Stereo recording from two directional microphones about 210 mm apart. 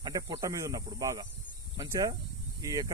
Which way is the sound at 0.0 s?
20° right (ahead or behind).